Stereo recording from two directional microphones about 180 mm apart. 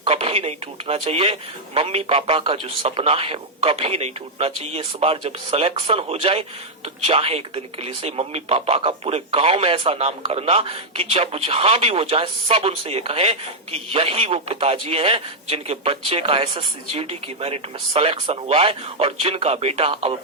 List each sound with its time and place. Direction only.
0.0 s speech: 35° right (ahead or behind)